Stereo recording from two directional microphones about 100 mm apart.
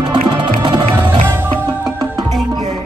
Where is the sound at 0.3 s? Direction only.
45° right (ahead or behind).